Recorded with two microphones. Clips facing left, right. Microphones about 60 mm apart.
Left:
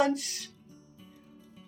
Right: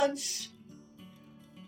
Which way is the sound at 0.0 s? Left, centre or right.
Left.